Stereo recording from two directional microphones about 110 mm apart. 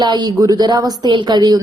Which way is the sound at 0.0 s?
40° right (ahead or behind).